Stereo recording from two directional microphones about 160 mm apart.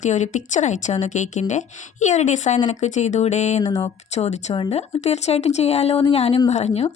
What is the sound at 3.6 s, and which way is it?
Speech, 25° left (ahead or behind).